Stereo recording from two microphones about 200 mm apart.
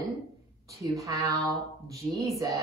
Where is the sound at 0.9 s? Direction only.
15° right (ahead or behind).